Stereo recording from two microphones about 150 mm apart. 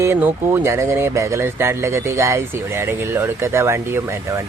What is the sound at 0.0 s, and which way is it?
Speech, 15° right (ahead or behind).